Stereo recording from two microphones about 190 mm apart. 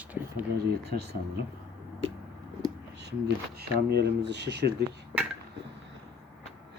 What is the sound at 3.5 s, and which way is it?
Speech, 60° right (ahead or behind).